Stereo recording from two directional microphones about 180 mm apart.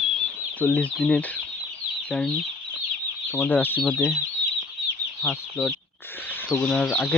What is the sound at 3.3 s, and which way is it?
Speech, 10° left (ahead or behind).